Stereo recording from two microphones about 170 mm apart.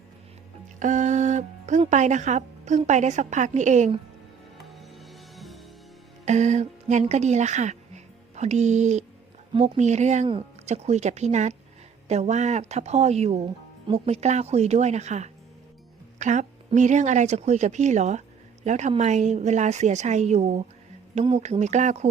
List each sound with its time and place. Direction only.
0.8 s speech: 45° right (ahead or behind)
4.5 s music: centre (ahead or behind)
6.2 s a woman's voice: 45° right (ahead or behind)